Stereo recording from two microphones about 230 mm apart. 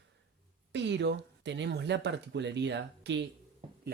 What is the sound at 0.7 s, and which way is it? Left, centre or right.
Speech, right.